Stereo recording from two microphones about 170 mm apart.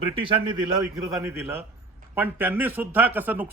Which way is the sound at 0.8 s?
20° right (ahead or behind).